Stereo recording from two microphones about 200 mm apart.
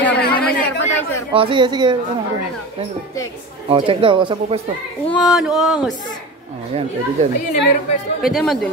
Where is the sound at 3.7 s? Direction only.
25° right (ahead or behind).